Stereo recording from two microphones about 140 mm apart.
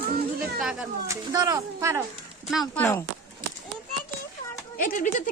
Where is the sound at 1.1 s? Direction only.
25° right (ahead or behind).